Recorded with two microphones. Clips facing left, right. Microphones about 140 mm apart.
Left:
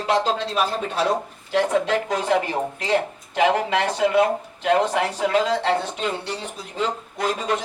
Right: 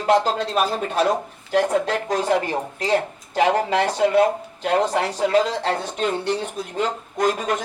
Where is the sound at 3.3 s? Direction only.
35° right (ahead or behind).